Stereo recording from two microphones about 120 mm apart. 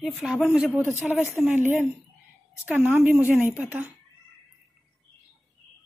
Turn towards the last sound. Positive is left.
turn(degrees=-15)  # may be behind; listen again after turning